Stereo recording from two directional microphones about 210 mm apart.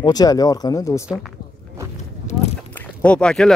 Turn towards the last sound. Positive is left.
turn(degrees=5)  # may be behind; listen again after turning